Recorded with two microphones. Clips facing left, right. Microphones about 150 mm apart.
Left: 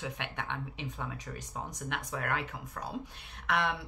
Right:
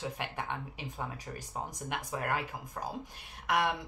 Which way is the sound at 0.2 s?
5° right (ahead or behind).